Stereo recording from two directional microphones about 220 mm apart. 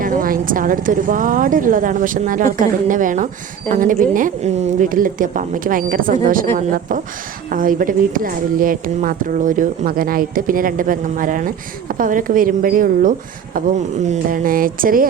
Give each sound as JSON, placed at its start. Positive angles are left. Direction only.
{"t": 0.0, "sound": "speech", "side_deg": -40}